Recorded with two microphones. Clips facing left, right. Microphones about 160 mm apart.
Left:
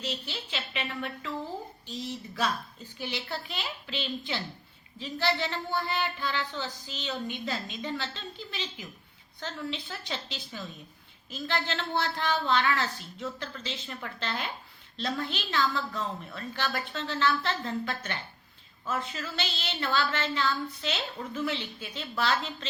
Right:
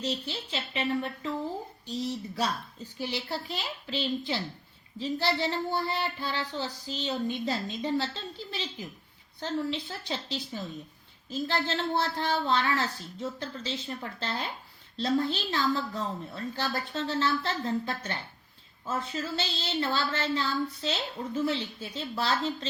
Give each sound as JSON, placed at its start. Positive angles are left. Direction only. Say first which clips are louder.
{"t": 0.0, "sound": "speech", "louder": "right 3 dB", "side_deg": -35}
{"t": 3.0, "sound": "speech", "louder": "right 2 dB", "side_deg": -30}
{"t": 11.7, "sound": "speech", "louder": "right 2 dB", "side_deg": -30}